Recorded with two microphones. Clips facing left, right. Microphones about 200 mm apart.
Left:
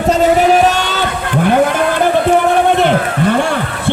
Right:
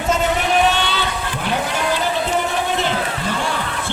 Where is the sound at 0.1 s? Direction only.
40° left (ahead or behind).